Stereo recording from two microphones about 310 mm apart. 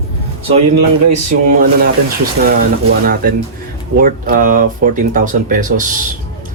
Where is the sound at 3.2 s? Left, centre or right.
Right.